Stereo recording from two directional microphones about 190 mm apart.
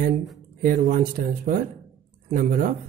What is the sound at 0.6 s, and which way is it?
Speech, 45° right (ahead or behind).